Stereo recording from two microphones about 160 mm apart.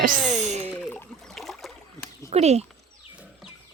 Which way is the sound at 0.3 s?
45° right (ahead or behind).